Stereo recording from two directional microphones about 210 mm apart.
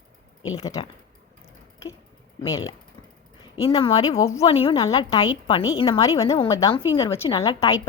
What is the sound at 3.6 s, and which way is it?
Speech, 25° left (ahead or behind).